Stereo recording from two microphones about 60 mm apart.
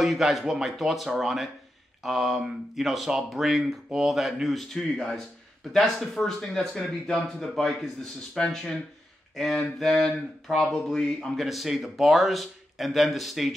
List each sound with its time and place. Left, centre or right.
0.0 s speech: centre
4.7 s mantra: centre
6.1 s speech: centre
8.4 s mantra: centre
11.1 s speech: centre